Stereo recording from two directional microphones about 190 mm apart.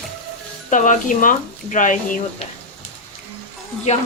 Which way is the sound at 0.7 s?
40° left (ahead or behind).